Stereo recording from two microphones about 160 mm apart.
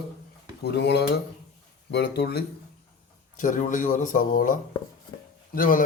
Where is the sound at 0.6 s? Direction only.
90° left.